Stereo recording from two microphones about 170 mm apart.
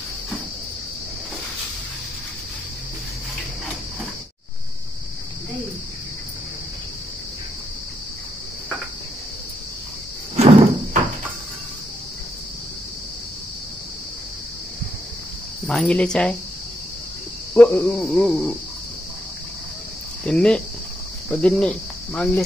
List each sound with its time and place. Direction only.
10.3 s cricket: 40° right (ahead or behind)
15.6 s cricket: 5° left (ahead or behind)
17.6 s cricket: 10° left (ahead or behind)
20.2 s cricket: 5° left (ahead or behind)
21.3 s speech: 5° left (ahead or behind)